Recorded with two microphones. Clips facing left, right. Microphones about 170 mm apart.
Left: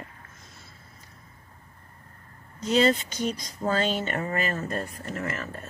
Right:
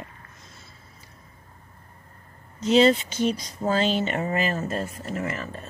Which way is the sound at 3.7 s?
50° left (ahead or behind).